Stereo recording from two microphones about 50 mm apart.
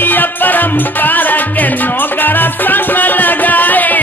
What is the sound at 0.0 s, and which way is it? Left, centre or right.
Music, left.